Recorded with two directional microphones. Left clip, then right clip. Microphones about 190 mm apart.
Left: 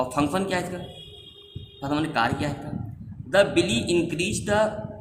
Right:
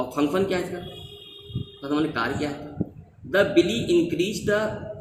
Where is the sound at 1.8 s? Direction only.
50° left (ahead or behind).